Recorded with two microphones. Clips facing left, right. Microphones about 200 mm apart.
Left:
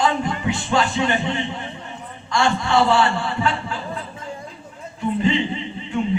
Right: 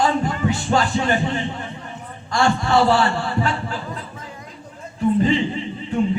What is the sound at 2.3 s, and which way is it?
A man's voice, 40° right (ahead or behind).